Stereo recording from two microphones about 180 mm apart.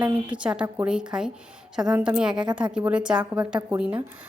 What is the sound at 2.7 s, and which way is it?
Speech, 5° right (ahead or behind).